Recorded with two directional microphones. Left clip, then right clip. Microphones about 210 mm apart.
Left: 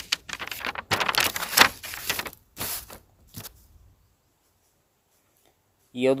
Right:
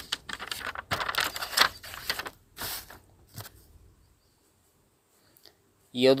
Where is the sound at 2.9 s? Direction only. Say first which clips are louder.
Left 4 dB; 50° left (ahead or behind).